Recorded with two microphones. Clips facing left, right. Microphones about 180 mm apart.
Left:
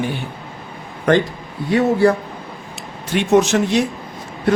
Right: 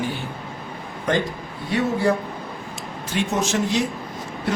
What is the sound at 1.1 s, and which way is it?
Speech, 65° left (ahead or behind).